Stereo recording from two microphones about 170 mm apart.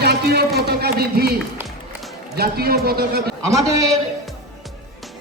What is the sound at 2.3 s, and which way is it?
A man's voice, 65° right (ahead or behind).